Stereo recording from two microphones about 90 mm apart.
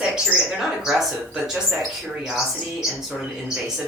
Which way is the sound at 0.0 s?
15° right (ahead or behind).